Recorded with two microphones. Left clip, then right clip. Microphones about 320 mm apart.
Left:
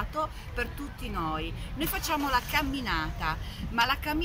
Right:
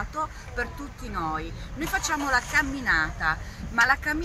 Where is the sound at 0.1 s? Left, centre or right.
Centre.